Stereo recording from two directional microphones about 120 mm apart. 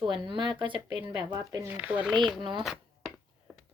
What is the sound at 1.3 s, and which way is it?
Speech, 20° right (ahead or behind).